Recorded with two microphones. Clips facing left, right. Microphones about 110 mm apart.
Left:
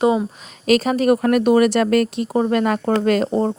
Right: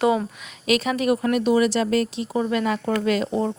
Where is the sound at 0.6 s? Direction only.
40° left (ahead or behind).